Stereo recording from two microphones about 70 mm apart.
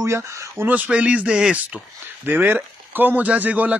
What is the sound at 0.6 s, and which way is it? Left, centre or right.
Speech, centre.